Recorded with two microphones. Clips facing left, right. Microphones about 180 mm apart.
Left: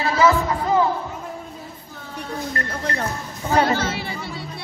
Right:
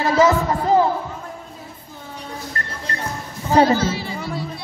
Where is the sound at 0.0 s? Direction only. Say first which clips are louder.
Right 2 dB; 45° right (ahead or behind).